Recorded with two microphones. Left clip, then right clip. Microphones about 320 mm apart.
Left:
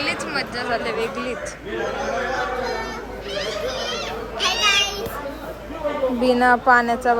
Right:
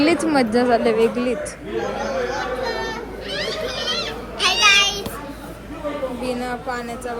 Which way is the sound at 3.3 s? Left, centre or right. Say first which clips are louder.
Even; centre.